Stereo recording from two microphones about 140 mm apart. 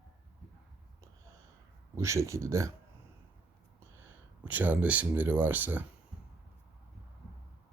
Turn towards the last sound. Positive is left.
turn(degrees=-15)  # may be behind; listen again after turning